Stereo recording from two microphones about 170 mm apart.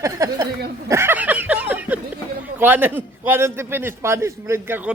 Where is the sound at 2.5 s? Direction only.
10° right (ahead or behind).